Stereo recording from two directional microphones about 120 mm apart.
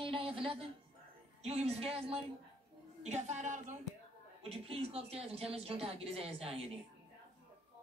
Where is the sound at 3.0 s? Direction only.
70° right (ahead or behind); by 3.8 s 90° right.